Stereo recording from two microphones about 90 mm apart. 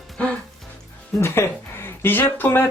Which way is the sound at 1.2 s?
25° left (ahead or behind).